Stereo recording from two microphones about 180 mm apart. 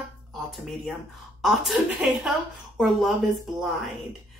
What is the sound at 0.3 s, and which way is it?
Speech, centre (ahead or behind).